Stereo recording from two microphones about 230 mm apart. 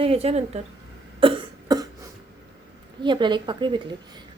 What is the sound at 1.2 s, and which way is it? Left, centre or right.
Cough, right.